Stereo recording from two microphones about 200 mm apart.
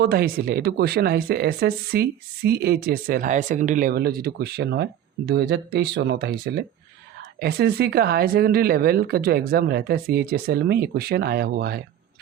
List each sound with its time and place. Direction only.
0.0 s speech: 50° right (ahead or behind)